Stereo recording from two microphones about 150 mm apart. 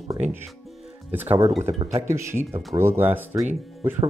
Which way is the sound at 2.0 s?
15° right (ahead or behind).